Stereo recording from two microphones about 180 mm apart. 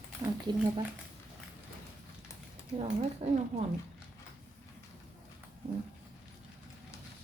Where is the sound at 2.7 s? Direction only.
40° right (ahead or behind).